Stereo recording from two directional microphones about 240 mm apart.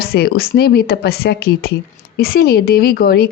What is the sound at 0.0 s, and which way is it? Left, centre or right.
A woman's voice, left.